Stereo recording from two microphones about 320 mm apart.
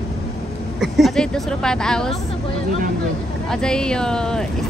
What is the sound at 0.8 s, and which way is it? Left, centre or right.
Speech, centre.